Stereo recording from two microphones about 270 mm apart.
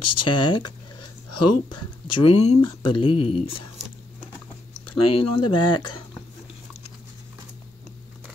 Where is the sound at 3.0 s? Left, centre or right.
Centre.